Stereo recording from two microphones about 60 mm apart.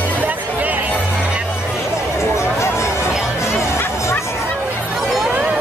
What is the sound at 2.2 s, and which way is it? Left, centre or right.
Music, left.